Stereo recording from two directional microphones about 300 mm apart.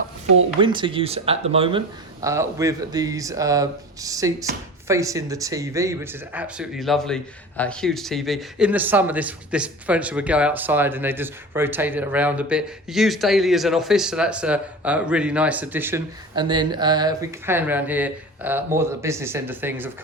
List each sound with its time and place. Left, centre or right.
0.6 s speech: centre